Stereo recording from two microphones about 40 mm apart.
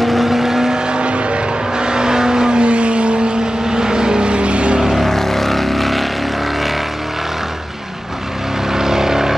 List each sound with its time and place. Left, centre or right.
0.0 s vehicle: centre
0.9 s vehicle: right
4.9 s vehicle: centre
8.7 s vehicle: centre